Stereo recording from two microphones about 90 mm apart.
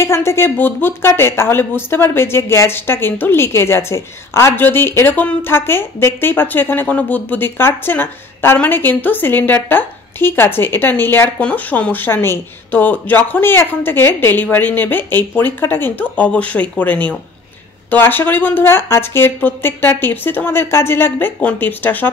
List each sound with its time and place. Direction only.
0.0 s speech: 30° left (ahead or behind)